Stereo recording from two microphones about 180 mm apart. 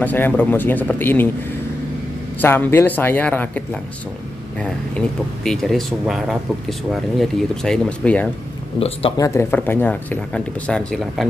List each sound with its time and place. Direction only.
0.0 s speech: 10° left (ahead or behind)
2.4 s speech: 10° left (ahead or behind)
8.7 s speech: 35° left (ahead or behind)
9.1 s speech: 15° left (ahead or behind)